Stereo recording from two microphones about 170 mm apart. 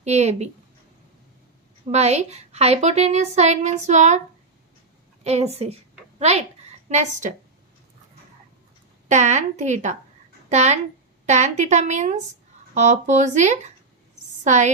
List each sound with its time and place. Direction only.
0.0 s a woman's voice: 40° right (ahead or behind)
1.9 s a woman's voice: 40° right (ahead or behind)
5.2 s a woman's voice: 40° right (ahead or behind)
9.0 s a woman's voice: 45° right (ahead or behind)